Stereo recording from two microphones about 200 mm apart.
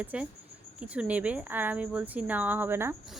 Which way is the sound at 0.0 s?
5° right (ahead or behind).